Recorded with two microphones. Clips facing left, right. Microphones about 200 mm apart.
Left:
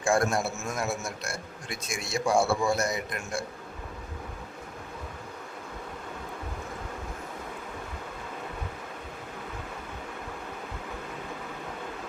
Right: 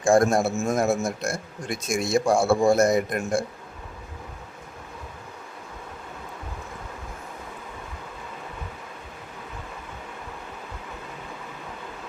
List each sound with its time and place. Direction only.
0.0 s speech: 45° right (ahead or behind)